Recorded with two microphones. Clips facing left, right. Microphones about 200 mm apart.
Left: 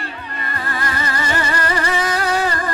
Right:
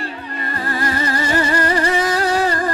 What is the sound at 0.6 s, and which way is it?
Music, 35° right (ahead or behind).